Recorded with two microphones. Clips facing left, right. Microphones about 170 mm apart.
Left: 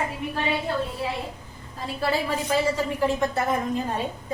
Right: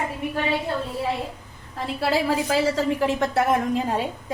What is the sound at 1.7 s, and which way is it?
A woman's voice, 90° right.